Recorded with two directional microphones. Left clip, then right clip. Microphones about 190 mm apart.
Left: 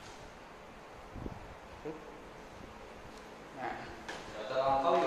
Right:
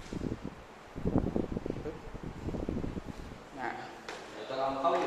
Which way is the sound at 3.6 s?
40° right (ahead or behind).